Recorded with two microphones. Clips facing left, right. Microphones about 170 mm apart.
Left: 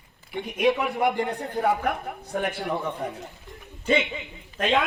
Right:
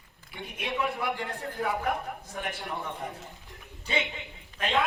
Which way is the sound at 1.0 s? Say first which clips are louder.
Left 8 dB; 65° left (ahead or behind).